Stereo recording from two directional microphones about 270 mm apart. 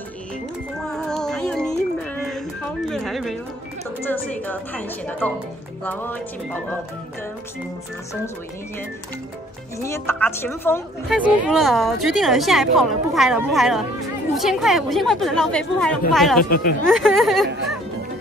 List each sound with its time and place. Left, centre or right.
0.8 s music: centre
2.9 s a sound: centre
4.1 s a woman's voice: centre
9.8 s a woman's voice: centre
16.4 s speech: left
16.8 s a woman's voice: centre